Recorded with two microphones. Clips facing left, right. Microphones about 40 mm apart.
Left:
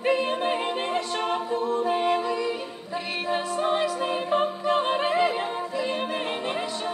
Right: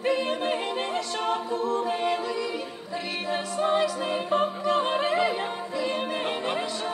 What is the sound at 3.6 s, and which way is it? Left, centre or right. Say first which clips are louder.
Music: right 3 dB; centre.